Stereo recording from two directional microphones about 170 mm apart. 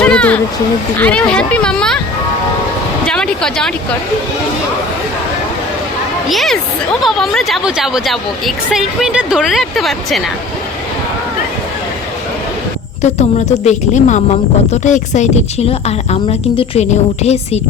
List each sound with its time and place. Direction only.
0.0 s a sound: 5° left (ahead or behind)
0.9 s speech: 10° left (ahead or behind)
3.1 s speech: 5° left (ahead or behind)
6.2 s speech: centre (ahead or behind)
13.0 s a woman's voice: 40° left (ahead or behind)